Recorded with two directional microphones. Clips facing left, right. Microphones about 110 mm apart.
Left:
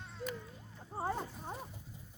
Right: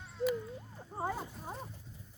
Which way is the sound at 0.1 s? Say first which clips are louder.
Right 10 dB; 5° right (ahead or behind).